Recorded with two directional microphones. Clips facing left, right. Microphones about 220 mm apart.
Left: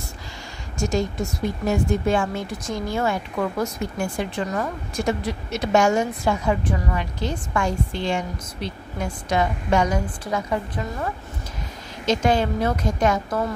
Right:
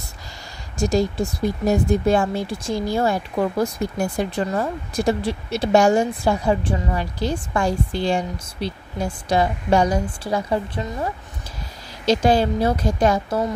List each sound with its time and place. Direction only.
0.7 s speech: 35° right (ahead or behind)
12.1 s speech: 35° right (ahead or behind)